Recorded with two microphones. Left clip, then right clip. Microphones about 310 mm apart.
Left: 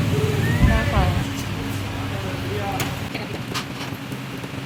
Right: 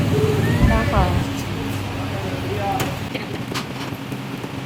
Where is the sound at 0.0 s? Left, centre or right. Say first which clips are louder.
Right 4 dB; centre.